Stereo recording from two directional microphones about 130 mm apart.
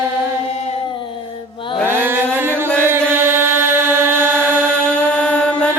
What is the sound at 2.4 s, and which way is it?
Music, 15° right (ahead or behind).